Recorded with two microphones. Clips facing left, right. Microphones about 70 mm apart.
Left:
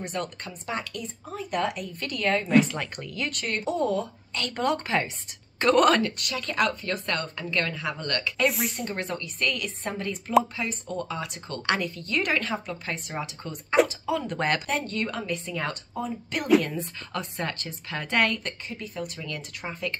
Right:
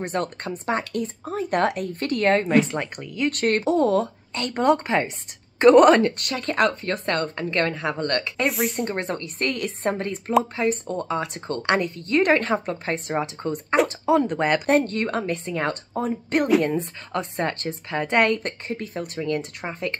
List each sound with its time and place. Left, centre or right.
0.0 s speech: right
3.0 s speech: centre
3.3 s speech: right
4.3 s speech: right
6.1 s a woman's voice: right
8.5 s speech: centre
8.9 s a woman's voice: right
14.2 s speech: centre
14.7 s a woman's voice: right
17.1 s a woman's voice: right